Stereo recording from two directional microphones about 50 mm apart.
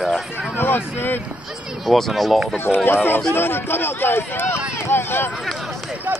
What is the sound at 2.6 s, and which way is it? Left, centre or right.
Speech, left.